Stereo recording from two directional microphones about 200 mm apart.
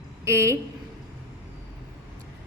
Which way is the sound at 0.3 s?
15° right (ahead or behind).